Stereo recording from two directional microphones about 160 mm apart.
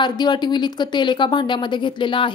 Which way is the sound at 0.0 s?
25° left (ahead or behind).